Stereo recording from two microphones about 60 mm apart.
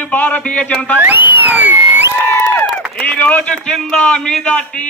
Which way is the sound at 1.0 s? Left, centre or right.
Right.